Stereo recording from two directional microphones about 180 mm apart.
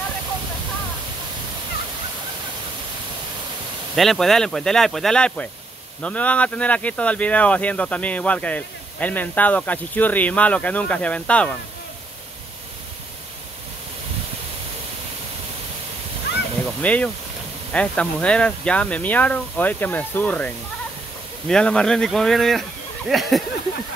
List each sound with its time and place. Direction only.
3.9 s speech: centre (ahead or behind)
16.3 s a sound: 70° left (ahead or behind)
16.8 s speech: 10° left (ahead or behind)